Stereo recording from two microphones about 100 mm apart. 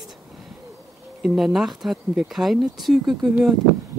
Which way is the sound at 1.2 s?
5° right (ahead or behind).